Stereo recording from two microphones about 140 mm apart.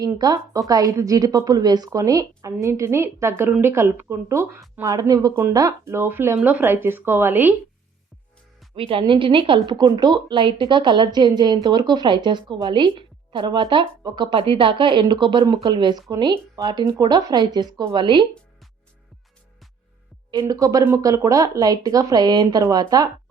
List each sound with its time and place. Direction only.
0.0 s a woman's voice: 30° right (ahead or behind)
8.7 s a woman's voice: 40° right (ahead or behind)
20.4 s a woman's voice: 25° right (ahead or behind)